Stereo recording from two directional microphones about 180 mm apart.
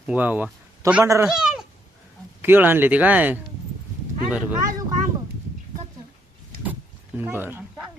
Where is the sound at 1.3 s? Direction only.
5° right (ahead or behind).